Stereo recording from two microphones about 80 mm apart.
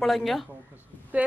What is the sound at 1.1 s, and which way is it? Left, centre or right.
Speech, centre.